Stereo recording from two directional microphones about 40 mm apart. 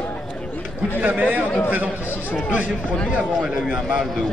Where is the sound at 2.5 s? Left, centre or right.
Right.